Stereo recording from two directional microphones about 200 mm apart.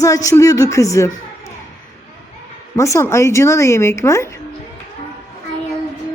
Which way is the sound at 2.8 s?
15° left (ahead or behind).